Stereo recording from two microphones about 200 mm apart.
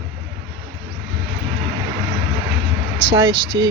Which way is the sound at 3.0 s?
20° right (ahead or behind).